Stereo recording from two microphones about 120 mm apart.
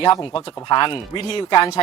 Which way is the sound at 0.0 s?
40° left (ahead or behind).